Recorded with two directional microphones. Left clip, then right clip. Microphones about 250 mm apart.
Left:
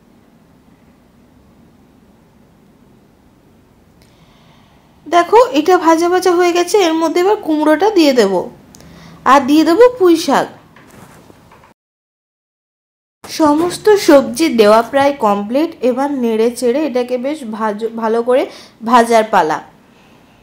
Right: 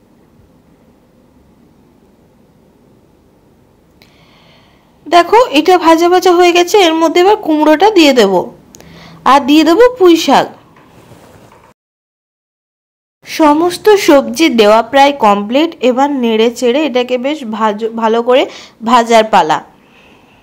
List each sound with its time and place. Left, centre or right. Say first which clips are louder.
5.1 s speech: right 2 dB; right
13.2 s speech: right 4 dB; right